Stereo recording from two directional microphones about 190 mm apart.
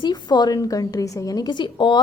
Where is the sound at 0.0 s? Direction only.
20° left (ahead or behind).